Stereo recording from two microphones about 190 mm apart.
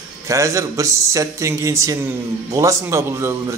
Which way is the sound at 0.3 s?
15° right (ahead or behind).